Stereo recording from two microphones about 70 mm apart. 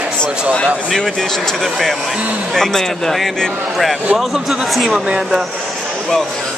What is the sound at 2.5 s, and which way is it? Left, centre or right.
Speech, centre.